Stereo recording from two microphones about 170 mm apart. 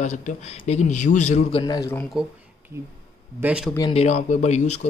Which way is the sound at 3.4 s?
5° right (ahead or behind).